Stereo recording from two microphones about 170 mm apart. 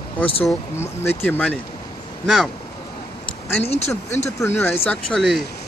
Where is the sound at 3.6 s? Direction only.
40° left (ahead or behind).